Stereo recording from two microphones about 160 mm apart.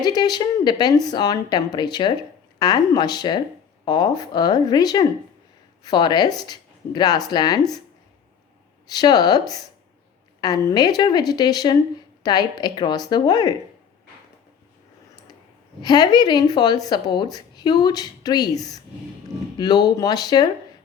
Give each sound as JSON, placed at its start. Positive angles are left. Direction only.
{"t": 0.0, "sound": "speech", "side_deg": 25}
{"t": 8.9, "sound": "speech", "side_deg": 25}
{"t": 15.8, "sound": "speech", "side_deg": 25}